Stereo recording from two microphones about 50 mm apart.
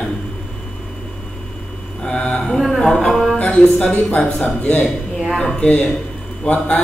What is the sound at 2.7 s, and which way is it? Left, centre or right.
Speech, centre.